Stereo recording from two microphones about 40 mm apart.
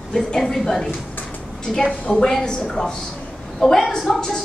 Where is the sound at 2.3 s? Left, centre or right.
Centre.